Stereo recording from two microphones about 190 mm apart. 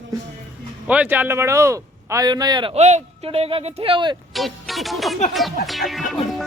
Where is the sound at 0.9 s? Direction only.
10° right (ahead or behind).